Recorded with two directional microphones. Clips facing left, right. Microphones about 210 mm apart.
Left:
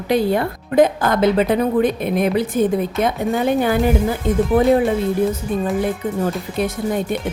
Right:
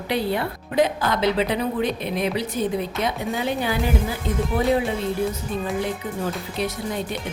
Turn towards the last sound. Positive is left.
turn(degrees=50)  # may be behind; listen again after turning